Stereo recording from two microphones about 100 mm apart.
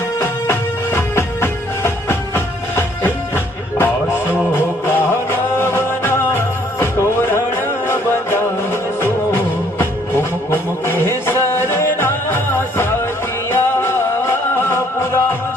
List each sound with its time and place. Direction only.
0.2 s music: 25° left (ahead or behind)
10.5 s a sound: 20° left (ahead or behind)
11.3 s music: 25° left (ahead or behind)
13.5 s music: 25° left (ahead or behind)